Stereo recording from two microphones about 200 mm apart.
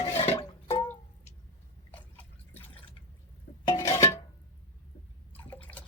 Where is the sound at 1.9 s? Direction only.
10° left (ahead or behind).